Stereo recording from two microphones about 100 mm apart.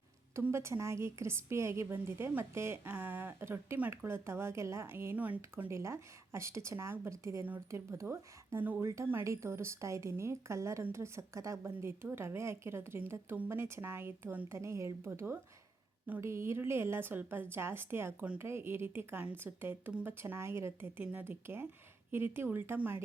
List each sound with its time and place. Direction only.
0.5 s a woman's voice: 30° right (ahead or behind)
7.4 s a woman's voice: 20° right (ahead or behind)